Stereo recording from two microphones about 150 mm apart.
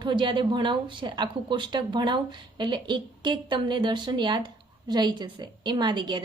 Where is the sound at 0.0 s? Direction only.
30° right (ahead or behind).